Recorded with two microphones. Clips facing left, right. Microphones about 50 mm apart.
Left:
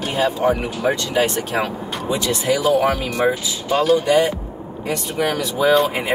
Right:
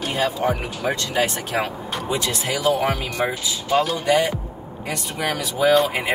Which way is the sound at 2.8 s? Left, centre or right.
Centre.